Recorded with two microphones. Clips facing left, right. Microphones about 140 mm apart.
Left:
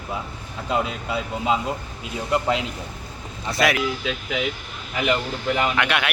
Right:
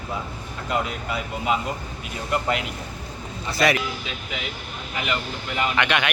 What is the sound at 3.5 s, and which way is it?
Speech, centre (ahead or behind).